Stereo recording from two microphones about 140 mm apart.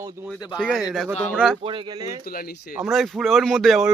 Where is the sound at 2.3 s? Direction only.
90° left.